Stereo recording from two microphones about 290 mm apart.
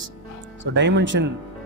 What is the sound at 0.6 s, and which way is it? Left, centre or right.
Speech, right.